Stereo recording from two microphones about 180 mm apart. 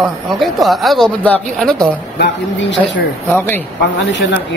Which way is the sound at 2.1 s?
75° left (ahead or behind).